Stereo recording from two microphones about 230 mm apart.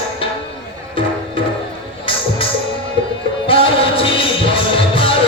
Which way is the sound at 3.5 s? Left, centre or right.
Left.